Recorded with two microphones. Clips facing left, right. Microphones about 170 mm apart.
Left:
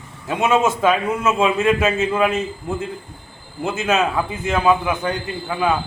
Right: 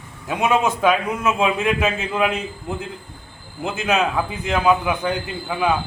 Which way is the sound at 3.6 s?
Centre (ahead or behind).